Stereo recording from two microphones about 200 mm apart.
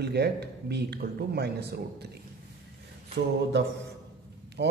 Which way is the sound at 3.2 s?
65° right (ahead or behind).